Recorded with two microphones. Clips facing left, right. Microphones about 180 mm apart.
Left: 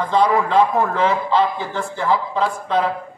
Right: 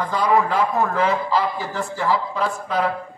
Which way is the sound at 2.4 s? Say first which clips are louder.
Left 3 dB; 30° left (ahead or behind).